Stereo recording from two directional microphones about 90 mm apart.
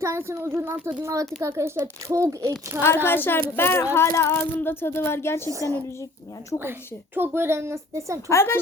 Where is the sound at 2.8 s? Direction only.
25° left (ahead or behind).